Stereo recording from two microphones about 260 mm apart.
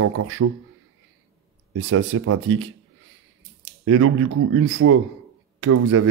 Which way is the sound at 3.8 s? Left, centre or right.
Right.